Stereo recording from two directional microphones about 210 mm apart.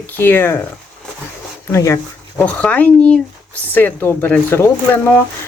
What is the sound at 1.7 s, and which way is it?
Speech, 10° left (ahead or behind).